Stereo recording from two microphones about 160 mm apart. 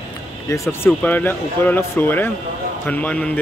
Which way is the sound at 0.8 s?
10° left (ahead or behind).